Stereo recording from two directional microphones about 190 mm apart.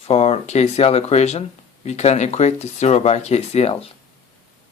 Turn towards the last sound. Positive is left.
turn(degrees=35)  # may be behind; listen again after turning